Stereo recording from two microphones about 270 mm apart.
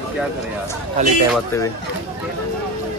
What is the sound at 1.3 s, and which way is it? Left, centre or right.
Speech, centre.